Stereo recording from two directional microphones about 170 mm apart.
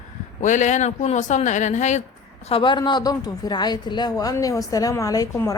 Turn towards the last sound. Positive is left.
turn(degrees=20)  # may be behind; listen again after turning